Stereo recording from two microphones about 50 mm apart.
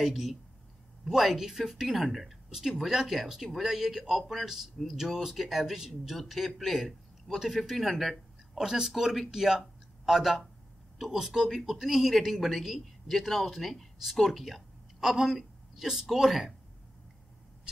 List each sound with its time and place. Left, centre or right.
0.0 s speech: centre